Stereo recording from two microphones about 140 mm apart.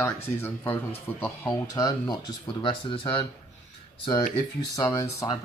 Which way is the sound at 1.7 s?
30° left (ahead or behind).